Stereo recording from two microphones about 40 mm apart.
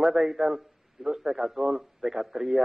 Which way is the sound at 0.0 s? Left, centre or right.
Centre.